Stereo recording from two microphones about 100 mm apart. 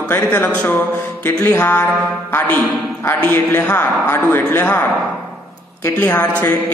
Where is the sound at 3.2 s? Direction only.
20° left (ahead or behind).